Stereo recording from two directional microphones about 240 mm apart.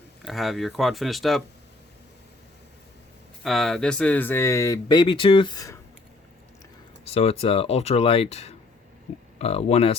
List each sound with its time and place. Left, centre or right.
0.2 s speech: centre
3.4 s speech: centre
7.0 s speech: left